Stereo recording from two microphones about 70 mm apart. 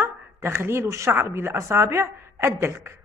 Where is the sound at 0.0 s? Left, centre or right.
Right.